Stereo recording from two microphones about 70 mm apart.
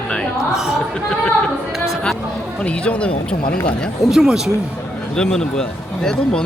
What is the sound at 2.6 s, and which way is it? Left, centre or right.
Speech, centre.